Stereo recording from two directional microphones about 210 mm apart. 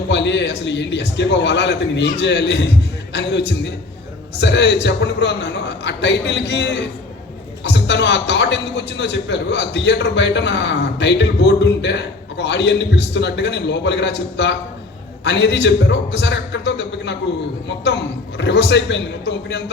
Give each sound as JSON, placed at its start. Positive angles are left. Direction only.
{"t": 0.1, "sound": "a man's voice", "side_deg": 55}